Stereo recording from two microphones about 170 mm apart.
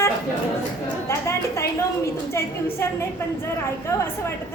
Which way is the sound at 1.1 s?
15° left (ahead or behind).